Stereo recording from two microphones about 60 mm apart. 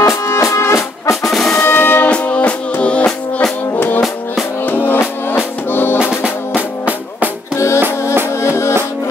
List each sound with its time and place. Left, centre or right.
0.0 s music: left
1.2 s music: centre
1.6 s music: left
2.0 s music: left
4.6 s music: left
6.2 s music: right
7.5 s music: left